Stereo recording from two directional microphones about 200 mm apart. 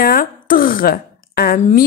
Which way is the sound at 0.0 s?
45° left (ahead or behind).